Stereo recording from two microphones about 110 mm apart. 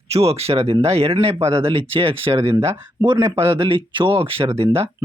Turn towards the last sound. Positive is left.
turn(degrees=-60)  # may be behind; listen again after turning